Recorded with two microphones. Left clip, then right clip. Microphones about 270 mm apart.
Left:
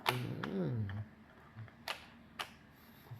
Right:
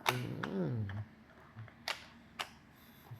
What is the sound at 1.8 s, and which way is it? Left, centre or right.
Camera, centre.